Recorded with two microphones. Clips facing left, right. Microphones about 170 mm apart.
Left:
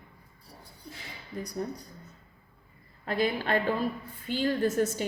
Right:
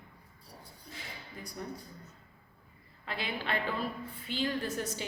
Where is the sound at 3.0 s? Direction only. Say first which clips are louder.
Left 8 dB; 45° left (ahead or behind).